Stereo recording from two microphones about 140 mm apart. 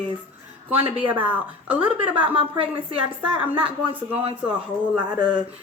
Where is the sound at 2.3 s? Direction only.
40° right (ahead or behind).